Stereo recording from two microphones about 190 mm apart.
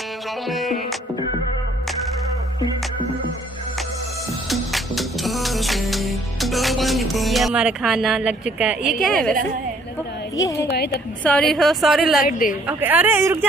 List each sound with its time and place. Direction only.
0.5 s a woman's voice: centre (ahead or behind)
4.5 s music: centre (ahead or behind)
9.0 s a woman's voice: centre (ahead or behind)
10.3 s speech: 15° left (ahead or behind)
10.7 s a woman's voice: 60° left (ahead or behind)
11.2 s a woman's voice: 5° left (ahead or behind)
12.2 s a woman's voice: 45° left (ahead or behind)
12.6 s speech: 10° right (ahead or behind)